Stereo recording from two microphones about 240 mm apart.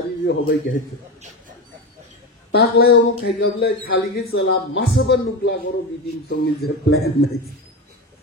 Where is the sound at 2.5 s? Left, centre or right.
Left.